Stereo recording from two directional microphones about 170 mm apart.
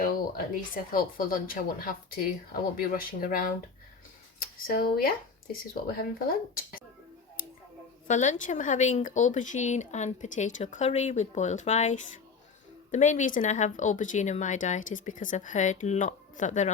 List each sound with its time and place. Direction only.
0.0 s speech: 55° left (ahead or behind)
8.0 s speech: 45° left (ahead or behind)